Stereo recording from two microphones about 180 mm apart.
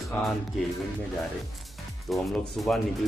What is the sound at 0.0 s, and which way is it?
Speech, centre (ahead or behind).